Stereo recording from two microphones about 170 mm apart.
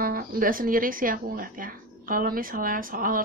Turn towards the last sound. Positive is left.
turn(degrees=-55)  # may be behind; listen again after turning